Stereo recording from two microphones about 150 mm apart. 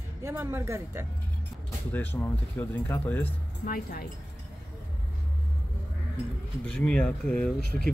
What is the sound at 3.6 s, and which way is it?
Speech, 75° left (ahead or behind).